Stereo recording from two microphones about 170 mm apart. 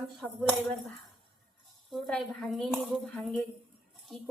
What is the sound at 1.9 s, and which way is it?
Speech, 5° left (ahead or behind).